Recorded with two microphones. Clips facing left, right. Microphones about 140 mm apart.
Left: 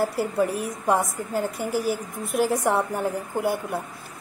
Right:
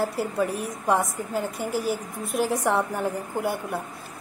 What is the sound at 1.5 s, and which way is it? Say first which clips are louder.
Speech: left 2 dB; 50° left (ahead or behind).